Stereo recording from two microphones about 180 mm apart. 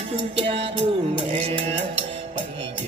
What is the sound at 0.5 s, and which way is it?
Music, 30° right (ahead or behind).